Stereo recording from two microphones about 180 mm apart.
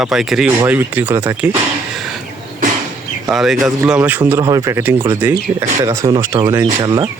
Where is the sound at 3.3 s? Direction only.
Centre (ahead or behind); by 7.1 s 20° right (ahead or behind).